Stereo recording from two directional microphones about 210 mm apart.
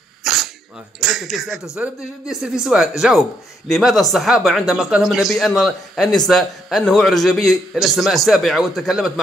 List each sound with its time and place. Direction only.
0.2 s dog: centre (ahead or behind)
1.0 s speech: centre (ahead or behind)